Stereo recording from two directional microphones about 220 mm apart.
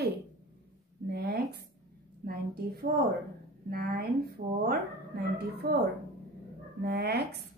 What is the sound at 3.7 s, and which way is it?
A woman's voice, 45° right (ahead or behind).